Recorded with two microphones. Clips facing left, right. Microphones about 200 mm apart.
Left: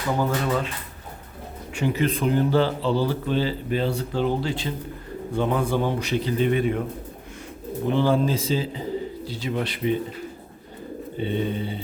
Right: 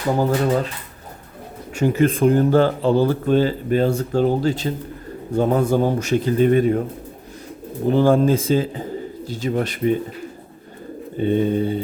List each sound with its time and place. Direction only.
0.2 s speech: 40° right (ahead or behind)
1.7 s speech: 45° right (ahead or behind)
7.9 s speech: 45° right (ahead or behind)
11.2 s speech: 45° right (ahead or behind)